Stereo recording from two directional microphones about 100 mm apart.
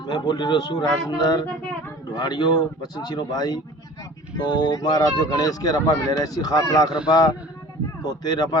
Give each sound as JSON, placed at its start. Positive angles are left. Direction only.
{"t": 0.0, "sound": "speech", "side_deg": 45}